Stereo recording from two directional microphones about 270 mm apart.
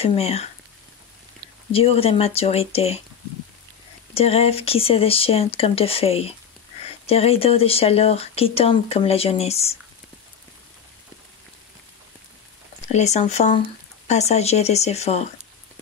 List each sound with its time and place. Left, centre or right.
0.0 s speech: left
1.7 s speech: left
4.1 s speech: left
12.8 s speech: left